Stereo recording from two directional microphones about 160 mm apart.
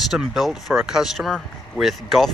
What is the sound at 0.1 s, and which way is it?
Speech, centre (ahead or behind).